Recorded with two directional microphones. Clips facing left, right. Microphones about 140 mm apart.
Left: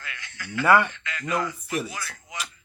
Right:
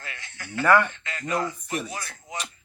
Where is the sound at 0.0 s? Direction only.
35° right (ahead or behind).